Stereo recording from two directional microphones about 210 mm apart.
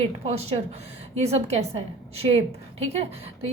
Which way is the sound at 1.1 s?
30° right (ahead or behind).